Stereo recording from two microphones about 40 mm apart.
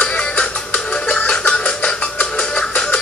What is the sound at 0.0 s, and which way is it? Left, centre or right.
Music, left.